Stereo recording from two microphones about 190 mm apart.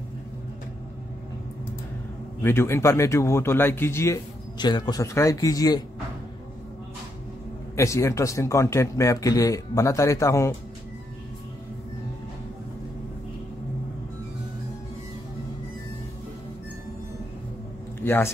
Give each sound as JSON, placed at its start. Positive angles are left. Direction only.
{"t": 2.4, "sound": "a man's voice", "side_deg": 10}
{"t": 7.7, "sound": "a man's voice", "side_deg": 15}
{"t": 18.0, "sound": "speech", "side_deg": 10}